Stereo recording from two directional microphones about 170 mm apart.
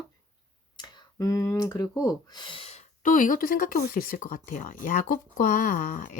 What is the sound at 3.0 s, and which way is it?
Speech, 50° left (ahead or behind).